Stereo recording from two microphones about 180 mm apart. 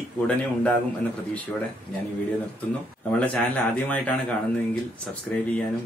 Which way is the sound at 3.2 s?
10° left (ahead or behind).